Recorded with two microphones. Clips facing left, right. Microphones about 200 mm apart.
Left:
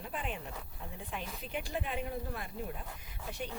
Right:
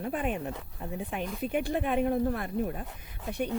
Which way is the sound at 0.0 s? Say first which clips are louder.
Right 9 dB; 55° right (ahead or behind).